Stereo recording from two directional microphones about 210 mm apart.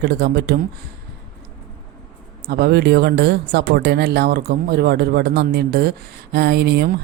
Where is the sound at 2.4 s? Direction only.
50° right (ahead or behind).